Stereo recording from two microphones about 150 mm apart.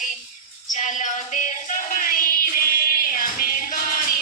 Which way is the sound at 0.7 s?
55° left (ahead or behind).